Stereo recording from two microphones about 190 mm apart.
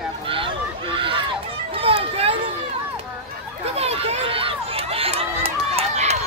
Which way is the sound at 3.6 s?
35° right (ahead or behind).